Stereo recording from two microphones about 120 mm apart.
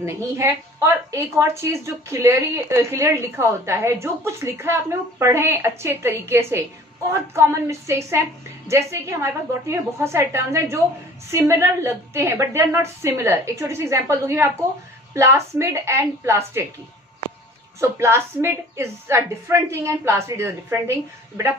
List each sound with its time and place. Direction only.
0.0 s a woman's voice: 20° right (ahead or behind)
17.7 s a woman's voice: 25° right (ahead or behind)